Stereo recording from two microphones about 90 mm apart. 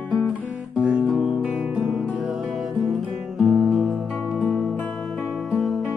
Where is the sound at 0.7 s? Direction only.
10° right (ahead or behind).